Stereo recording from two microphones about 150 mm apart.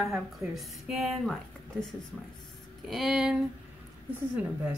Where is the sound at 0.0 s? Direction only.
Centre (ahead or behind).